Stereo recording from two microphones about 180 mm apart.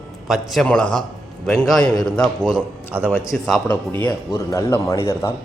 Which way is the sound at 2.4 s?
10° right (ahead or behind).